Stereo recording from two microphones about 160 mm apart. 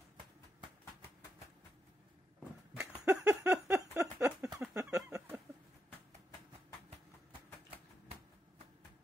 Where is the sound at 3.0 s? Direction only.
20° right (ahead or behind).